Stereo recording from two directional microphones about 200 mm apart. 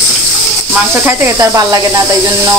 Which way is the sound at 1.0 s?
15° right (ahead or behind).